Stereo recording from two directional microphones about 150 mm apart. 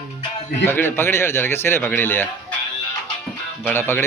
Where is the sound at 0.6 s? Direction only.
15° left (ahead or behind).